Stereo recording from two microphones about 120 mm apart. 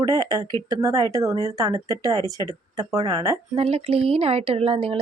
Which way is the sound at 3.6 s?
55° right (ahead or behind).